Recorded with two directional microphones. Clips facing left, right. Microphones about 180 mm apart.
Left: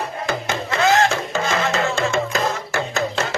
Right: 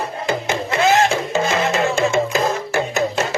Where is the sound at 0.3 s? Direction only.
20° right (ahead or behind).